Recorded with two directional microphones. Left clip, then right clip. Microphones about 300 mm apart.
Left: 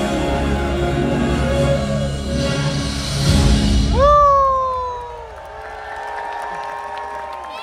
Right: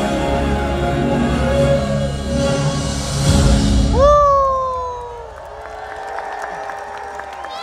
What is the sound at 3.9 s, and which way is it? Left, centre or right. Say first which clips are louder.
Music: even; centre.